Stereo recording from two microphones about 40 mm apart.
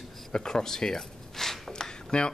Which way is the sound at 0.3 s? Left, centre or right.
Centre.